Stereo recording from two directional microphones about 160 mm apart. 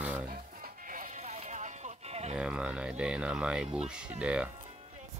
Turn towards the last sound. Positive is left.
turn(degrees=-5)  # may be behind; listen again after turning